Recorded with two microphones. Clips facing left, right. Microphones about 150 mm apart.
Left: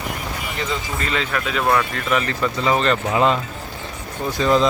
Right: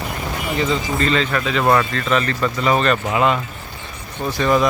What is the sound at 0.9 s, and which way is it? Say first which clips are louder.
Speech: right 4 dB; 10° left (ahead or behind).